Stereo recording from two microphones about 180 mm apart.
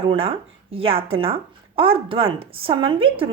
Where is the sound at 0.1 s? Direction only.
30° right (ahead or behind).